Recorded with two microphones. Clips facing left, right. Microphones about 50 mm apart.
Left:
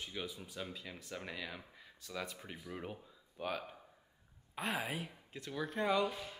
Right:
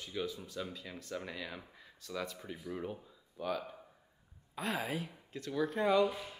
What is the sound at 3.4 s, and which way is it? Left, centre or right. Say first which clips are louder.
Speech: right 3 dB; left.